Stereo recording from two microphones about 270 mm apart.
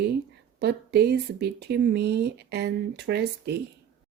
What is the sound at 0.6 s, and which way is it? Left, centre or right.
Speech, right.